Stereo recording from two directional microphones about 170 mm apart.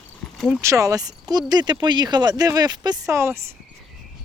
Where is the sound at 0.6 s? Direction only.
20° right (ahead or behind).